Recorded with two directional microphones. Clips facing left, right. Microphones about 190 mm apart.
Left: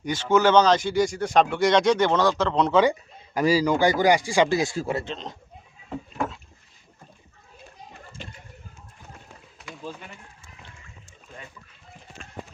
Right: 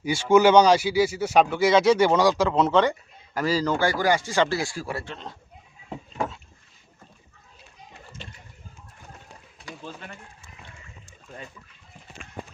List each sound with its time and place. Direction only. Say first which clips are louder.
0.0 s speech: right 3 dB; 10° right (ahead or behind)
3.3 s speech: left 3 dB; 15° left (ahead or behind)